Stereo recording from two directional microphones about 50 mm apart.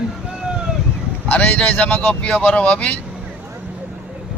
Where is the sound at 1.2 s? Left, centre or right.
Left.